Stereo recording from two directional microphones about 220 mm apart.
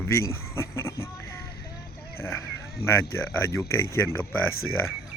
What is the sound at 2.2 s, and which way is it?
Speech, 10° left (ahead or behind).